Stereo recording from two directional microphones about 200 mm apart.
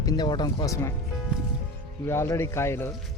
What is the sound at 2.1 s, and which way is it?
Speech, 15° left (ahead or behind).